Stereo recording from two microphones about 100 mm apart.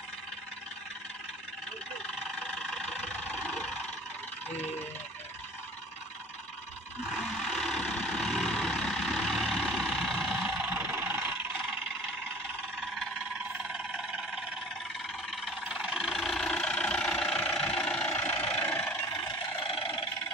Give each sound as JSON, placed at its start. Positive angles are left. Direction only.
{"t": 2.6, "sound": "vehicle", "side_deg": 0}
{"t": 7.1, "sound": "vehicle", "side_deg": 0}
{"t": 10.7, "sound": "vehicle", "side_deg": -20}
{"t": 15.6, "sound": "vehicle", "side_deg": -10}
{"t": 19.2, "sound": "vehicle", "side_deg": 60}